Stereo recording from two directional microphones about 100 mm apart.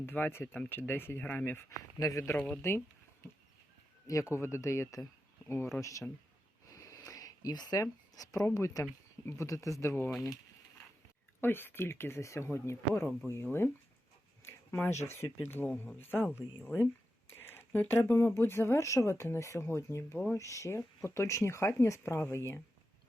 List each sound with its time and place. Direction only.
0.0 s speech: 20° left (ahead or behind)
2.0 s speech: 35° left (ahead or behind)
2.3 s speech: 15° left (ahead or behind)
4.0 s speech: 30° left (ahead or behind)
6.7 s a sound: 30° left (ahead or behind)
8.5 s speech: 30° left (ahead or behind)
10.1 s speech: centre (ahead or behind)
11.3 s speech: 20° left (ahead or behind)
14.4 s a sound: 25° left (ahead or behind)
15.0 s speech: 25° left (ahead or behind)